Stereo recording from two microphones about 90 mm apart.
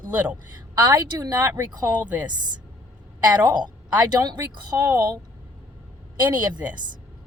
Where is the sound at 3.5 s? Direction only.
50° right (ahead or behind).